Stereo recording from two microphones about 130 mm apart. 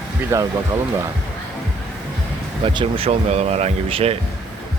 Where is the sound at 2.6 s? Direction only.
45° right (ahead or behind).